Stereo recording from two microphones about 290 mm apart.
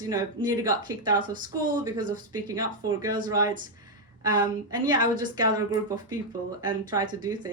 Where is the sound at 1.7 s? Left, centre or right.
Centre.